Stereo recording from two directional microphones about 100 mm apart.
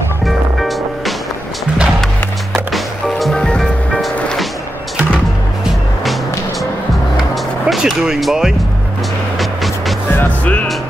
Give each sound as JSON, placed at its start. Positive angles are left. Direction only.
{"t": 0.2, "sound": "music", "side_deg": 0}
{"t": 2.5, "sound": "music", "side_deg": 0}
{"t": 7.6, "sound": "speech", "side_deg": -5}
{"t": 9.4, "sound": "music", "side_deg": 0}
{"t": 10.1, "sound": "music", "side_deg": 15}